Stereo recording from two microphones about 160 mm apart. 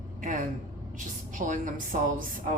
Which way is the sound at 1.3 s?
55° right (ahead or behind).